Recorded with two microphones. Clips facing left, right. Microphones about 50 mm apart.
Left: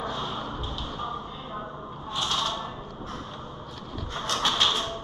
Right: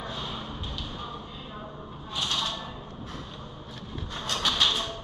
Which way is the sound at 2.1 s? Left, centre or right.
Left.